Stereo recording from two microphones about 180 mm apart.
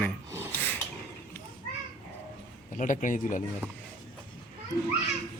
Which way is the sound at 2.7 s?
45° left (ahead or behind).